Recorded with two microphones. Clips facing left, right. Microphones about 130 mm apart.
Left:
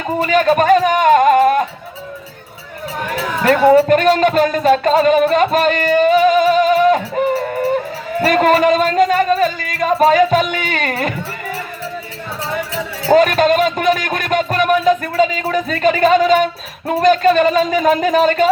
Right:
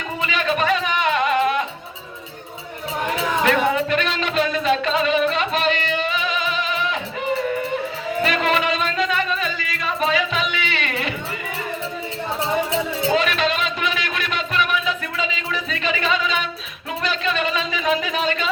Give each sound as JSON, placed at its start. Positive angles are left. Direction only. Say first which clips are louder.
{"t": 0.2, "sound": "music", "louder": "left 9 dB", "side_deg": 45}
{"t": 3.4, "sound": "music", "louder": "left 11 dB", "side_deg": 45}
{"t": 8.2, "sound": "speech", "louder": "left 9 dB", "side_deg": 45}
{"t": 12.5, "sound": "speech", "louder": "right 2 dB", "side_deg": -20}
{"t": 13.1, "sound": "speech", "louder": "left 11 dB", "side_deg": 45}